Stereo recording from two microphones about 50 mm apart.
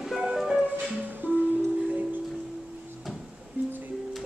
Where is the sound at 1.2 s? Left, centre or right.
Right.